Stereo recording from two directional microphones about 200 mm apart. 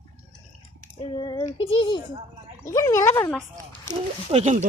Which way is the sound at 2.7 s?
15° left (ahead or behind).